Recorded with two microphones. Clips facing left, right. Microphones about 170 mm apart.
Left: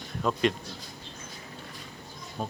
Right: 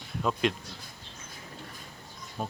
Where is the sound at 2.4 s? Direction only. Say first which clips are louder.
Left 1 dB; 5° right (ahead or behind).